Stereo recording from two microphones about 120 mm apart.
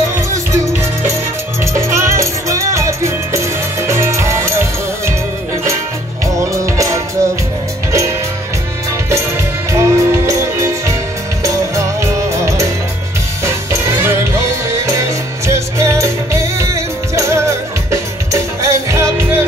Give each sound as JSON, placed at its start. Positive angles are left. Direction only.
{"t": 1.6, "sound": "music", "side_deg": -25}
{"t": 6.2, "sound": "music", "side_deg": -25}
{"t": 9.7, "sound": "music", "side_deg": -25}